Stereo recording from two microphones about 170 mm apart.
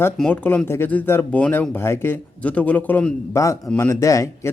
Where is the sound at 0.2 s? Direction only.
10° left (ahead or behind).